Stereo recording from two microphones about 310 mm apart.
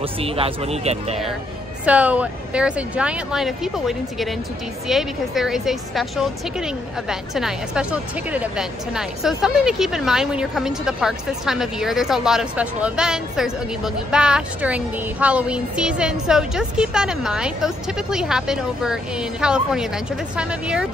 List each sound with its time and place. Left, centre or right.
0.0 s speech: centre
1.9 s a woman's voice: centre